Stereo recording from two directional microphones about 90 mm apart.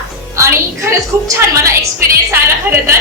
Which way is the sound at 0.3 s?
30° right (ahead or behind).